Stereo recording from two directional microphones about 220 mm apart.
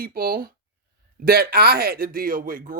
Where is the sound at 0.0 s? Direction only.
40° right (ahead or behind).